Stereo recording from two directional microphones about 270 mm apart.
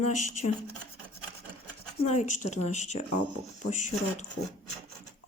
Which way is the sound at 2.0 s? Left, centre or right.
Left.